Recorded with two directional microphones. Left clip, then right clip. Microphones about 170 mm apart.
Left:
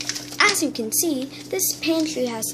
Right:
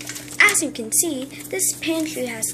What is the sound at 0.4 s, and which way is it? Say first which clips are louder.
A woman's voice: right 2 dB; 15° left (ahead or behind).